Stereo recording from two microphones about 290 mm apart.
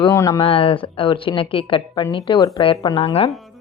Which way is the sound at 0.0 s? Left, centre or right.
Centre.